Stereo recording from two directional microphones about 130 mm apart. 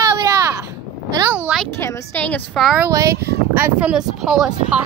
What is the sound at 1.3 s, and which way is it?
Speech, 10° right (ahead or behind).